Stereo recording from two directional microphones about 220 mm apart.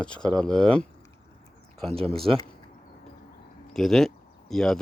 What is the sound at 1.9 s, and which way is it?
Speech, 25° right (ahead or behind).